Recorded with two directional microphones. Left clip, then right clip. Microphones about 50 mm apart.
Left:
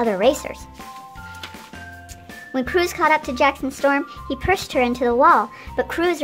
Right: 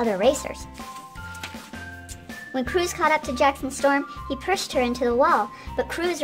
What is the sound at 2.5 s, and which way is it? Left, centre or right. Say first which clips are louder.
Speech: left 4 dB; left.